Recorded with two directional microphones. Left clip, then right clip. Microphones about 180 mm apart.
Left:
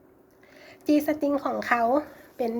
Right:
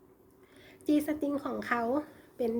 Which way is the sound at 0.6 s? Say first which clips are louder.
Left 6 dB; 25° right (ahead or behind).